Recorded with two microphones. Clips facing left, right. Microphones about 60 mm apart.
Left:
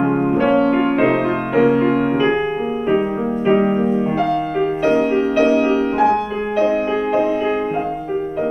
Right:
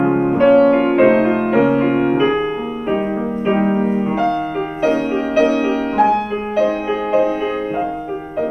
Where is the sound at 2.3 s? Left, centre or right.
Centre.